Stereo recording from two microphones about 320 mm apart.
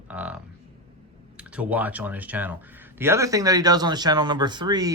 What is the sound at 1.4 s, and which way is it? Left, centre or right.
Speech, centre.